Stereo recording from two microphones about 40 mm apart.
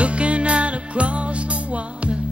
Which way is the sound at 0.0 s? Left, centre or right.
Right.